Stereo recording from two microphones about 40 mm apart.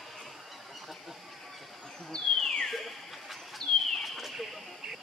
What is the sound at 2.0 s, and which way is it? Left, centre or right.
Bird, centre.